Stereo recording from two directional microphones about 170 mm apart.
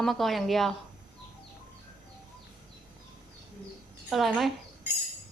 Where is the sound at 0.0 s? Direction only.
Centre (ahead or behind).